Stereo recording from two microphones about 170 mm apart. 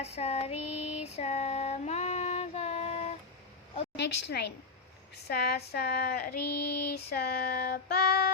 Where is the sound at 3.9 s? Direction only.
85° left.